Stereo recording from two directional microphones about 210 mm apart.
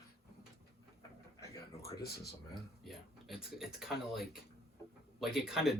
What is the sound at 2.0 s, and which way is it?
Speech, 50° left (ahead or behind).